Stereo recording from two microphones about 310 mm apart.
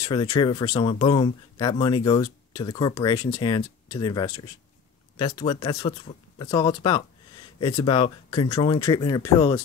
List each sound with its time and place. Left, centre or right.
0.0 s speech: centre